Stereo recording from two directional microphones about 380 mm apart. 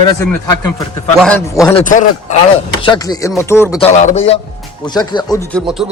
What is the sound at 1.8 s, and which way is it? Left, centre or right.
A man's voice, centre.